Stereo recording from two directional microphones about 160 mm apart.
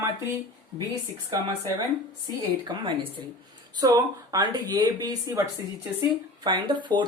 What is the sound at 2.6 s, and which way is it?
Speech, 30° right (ahead or behind).